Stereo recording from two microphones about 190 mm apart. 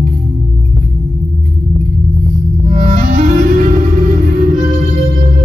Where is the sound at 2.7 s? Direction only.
45° right (ahead or behind).